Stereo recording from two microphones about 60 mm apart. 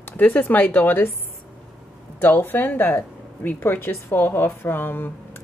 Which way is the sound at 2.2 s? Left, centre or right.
Left.